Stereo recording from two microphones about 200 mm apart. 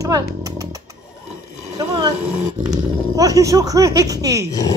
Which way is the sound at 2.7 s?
20° right (ahead or behind).